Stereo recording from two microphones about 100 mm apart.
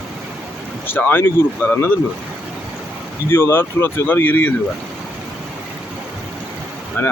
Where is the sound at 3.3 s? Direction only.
25° left (ahead or behind).